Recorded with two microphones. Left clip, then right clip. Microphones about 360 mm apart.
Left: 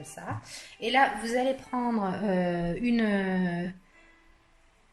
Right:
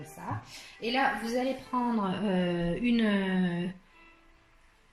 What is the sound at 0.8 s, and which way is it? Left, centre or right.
A woman's voice, left.